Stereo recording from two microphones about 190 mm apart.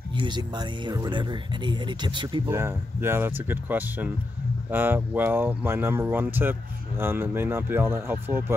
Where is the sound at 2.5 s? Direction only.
15° right (ahead or behind).